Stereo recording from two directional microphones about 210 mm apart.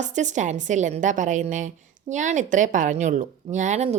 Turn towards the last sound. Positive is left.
turn(degrees=-30)  # may be behind; listen again after turning